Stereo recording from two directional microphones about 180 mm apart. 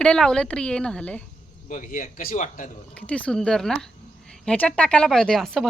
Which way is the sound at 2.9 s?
5° left (ahead or behind).